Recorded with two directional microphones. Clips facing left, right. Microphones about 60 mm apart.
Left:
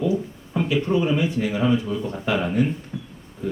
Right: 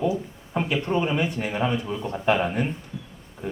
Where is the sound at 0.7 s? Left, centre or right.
Right.